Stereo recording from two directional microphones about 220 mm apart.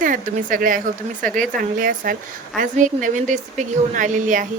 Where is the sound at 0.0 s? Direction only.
35° right (ahead or behind).